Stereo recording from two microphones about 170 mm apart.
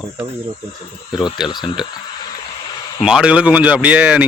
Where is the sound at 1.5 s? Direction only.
25° left (ahead or behind).